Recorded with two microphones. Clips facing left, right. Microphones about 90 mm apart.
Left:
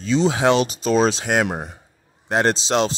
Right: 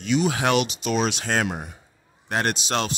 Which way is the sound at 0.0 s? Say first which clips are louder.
Left 4 dB; 30° left (ahead or behind).